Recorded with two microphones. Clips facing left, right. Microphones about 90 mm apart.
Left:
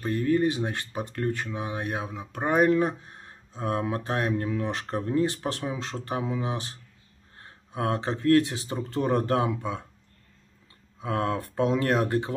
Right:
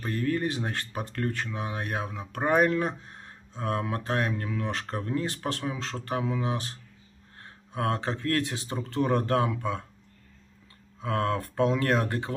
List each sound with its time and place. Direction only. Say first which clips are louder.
0.0 s speech: left 4 dB; 20° left (ahead or behind)
7.7 s speech: left 1 dB; 20° left (ahead or behind)
11.0 s speech: even; 20° left (ahead or behind)